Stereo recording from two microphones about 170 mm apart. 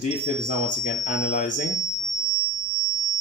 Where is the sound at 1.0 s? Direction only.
45° left (ahead or behind).